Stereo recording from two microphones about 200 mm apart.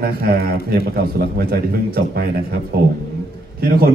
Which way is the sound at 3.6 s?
50° right (ahead or behind).